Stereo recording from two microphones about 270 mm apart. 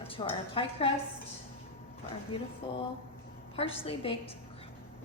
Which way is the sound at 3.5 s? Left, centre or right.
Left.